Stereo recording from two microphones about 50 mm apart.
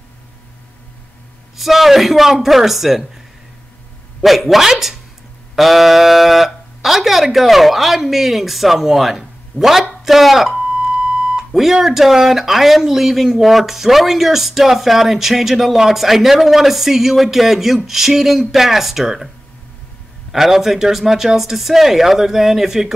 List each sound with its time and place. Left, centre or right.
1.6 s speech: centre
10.6 s beep: centre
11.5 s speech: centre